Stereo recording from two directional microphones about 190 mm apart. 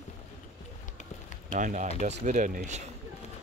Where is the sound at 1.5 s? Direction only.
40° right (ahead or behind).